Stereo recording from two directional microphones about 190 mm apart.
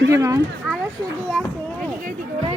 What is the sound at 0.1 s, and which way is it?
Speech, 15° right (ahead or behind).